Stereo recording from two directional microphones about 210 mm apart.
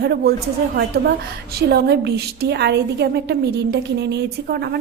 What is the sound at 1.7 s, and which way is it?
A woman's voice, 50° right (ahead or behind).